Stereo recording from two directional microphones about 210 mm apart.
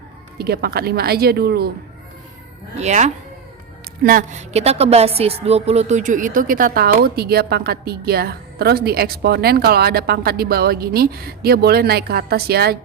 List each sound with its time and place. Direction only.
0.3 s a woman's voice: 50° right (ahead or behind)
2.7 s a woman's voice: 35° right (ahead or behind)